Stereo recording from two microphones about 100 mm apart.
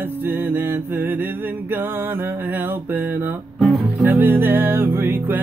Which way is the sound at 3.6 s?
Centre (ahead or behind).